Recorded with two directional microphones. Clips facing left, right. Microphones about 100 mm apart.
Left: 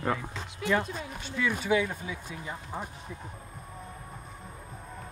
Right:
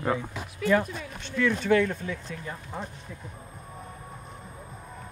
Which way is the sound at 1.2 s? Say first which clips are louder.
Right 5 dB; 10° left (ahead or behind).